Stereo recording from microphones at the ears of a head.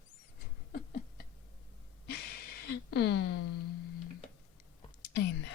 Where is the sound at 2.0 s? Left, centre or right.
Left.